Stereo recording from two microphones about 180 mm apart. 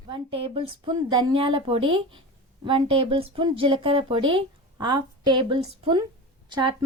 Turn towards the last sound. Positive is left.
turn(degrees=-25)  # may be behind; listen again after turning